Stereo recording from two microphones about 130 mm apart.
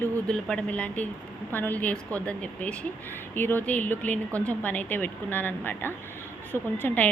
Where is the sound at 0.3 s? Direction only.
5° left (ahead or behind).